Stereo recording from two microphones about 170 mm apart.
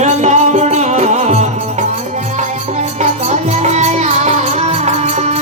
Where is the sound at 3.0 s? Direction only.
40° right (ahead or behind).